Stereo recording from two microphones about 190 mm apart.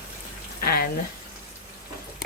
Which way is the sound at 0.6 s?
50° left (ahead or behind).